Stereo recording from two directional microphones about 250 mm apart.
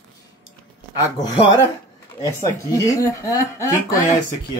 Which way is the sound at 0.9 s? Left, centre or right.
Centre.